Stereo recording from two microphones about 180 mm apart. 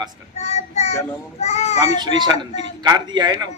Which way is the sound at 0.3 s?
35° left (ahead or behind).